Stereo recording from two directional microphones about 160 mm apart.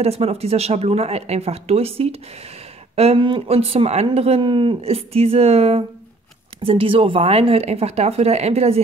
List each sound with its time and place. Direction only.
0.0 s speech: 40° right (ahead or behind)